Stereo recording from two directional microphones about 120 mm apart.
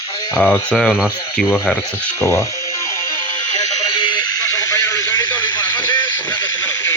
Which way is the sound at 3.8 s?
40° left (ahead or behind).